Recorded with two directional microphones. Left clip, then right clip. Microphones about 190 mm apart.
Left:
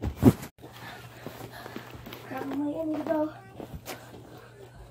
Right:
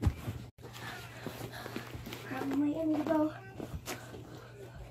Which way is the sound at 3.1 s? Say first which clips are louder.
Left 3 dB; 5° left (ahead or behind).